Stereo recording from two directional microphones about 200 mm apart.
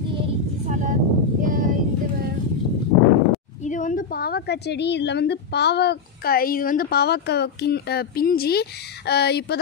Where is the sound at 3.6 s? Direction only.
40° left (ahead or behind).